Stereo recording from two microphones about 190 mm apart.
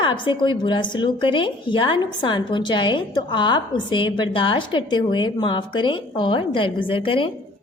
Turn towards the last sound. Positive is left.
turn(degrees=30)  # may be behind; listen again after turning